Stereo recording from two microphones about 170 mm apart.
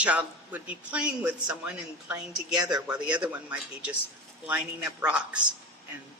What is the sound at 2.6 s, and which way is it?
Speech, 25° right (ahead or behind).